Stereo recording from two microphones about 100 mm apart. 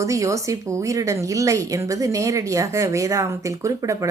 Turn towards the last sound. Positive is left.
turn(degrees=-30)  # may be behind; listen again after turning